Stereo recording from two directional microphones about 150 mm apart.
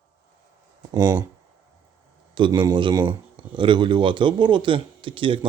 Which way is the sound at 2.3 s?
30° right (ahead or behind).